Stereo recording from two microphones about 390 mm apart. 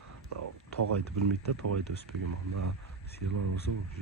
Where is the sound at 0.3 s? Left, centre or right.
Right.